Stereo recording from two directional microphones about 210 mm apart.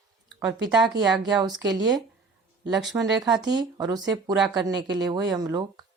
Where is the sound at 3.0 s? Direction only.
15° right (ahead or behind).